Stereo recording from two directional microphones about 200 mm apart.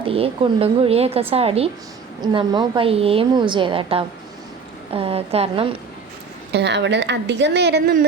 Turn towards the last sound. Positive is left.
turn(degrees=-50)  # may be behind; listen again after turning